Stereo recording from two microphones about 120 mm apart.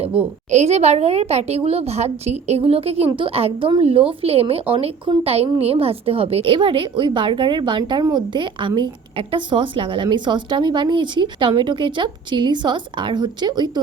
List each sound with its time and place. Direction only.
0.5 s a woman's voice: 65° right (ahead or behind); by 13.7 s 35° right (ahead or behind)